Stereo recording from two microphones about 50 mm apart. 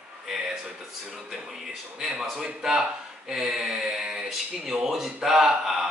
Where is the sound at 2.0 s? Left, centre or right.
Centre.